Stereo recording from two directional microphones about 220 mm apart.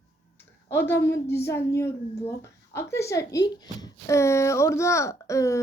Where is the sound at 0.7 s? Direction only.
10° left (ahead or behind).